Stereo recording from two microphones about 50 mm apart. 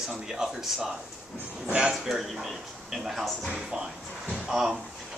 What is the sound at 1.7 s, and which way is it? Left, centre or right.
Speech, centre.